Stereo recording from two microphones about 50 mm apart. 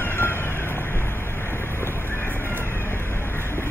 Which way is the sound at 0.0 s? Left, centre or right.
Left.